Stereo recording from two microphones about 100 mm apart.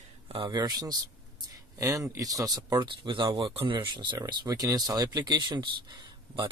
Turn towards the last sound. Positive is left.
turn(degrees=-55)  # may be behind; listen again after turning